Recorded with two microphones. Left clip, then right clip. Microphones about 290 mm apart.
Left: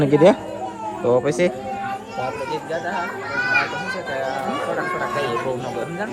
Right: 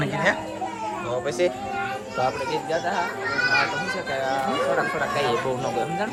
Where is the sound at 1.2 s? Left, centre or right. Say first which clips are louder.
Left 4 dB; left.